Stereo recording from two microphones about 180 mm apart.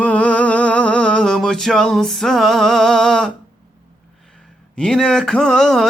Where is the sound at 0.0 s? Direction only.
5° left (ahead or behind).